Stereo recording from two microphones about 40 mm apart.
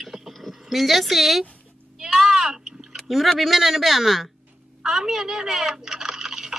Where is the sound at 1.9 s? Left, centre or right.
Centre.